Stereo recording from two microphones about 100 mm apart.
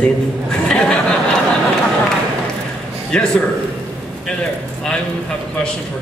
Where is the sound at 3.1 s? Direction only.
10° left (ahead or behind).